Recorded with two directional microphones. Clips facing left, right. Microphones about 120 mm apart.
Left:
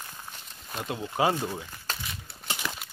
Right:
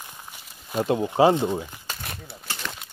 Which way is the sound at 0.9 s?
25° right (ahead or behind).